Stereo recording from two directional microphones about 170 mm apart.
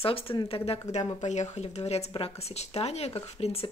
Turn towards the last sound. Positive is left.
turn(degrees=35)  # may be behind; listen again after turning